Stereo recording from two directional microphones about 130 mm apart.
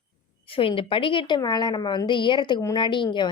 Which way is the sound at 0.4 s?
45° left (ahead or behind).